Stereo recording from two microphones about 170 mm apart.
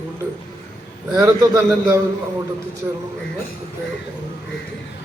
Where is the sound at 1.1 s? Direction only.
20° right (ahead or behind).